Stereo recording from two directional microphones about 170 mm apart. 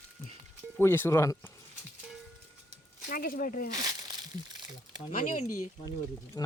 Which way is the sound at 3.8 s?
20° right (ahead or behind).